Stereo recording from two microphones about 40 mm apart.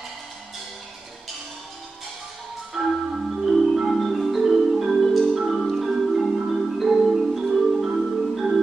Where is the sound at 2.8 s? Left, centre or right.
Centre.